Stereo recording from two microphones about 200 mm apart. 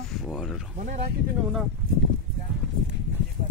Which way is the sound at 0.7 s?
40° right (ahead or behind).